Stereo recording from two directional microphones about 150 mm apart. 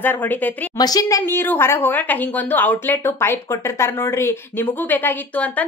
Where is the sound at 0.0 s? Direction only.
15° left (ahead or behind).